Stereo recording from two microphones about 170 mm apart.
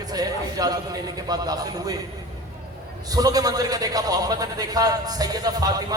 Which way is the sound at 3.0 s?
20° right (ahead or behind).